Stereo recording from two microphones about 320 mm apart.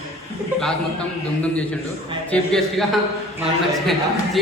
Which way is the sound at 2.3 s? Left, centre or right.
Centre.